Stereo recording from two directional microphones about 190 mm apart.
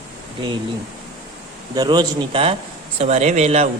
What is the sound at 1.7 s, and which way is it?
A man's voice, 20° right (ahead or behind).